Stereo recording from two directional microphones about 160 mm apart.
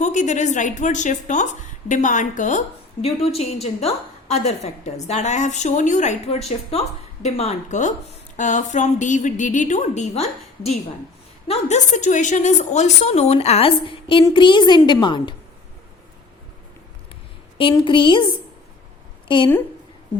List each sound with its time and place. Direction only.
0.0 s a woman's voice: 50° left (ahead or behind); by 15.4 s 30° left (ahead or behind)
17.6 s a woman's voice: 30° left (ahead or behind)
19.3 s a woman's voice: 30° left (ahead or behind)